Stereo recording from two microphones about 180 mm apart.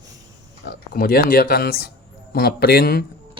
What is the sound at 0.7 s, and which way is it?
Speech, 55° left (ahead or behind).